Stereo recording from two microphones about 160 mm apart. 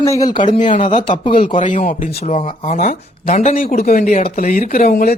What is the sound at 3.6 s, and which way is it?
Speech, 65° left (ahead or behind).